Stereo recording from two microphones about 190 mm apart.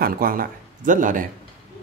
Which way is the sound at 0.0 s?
50° right (ahead or behind).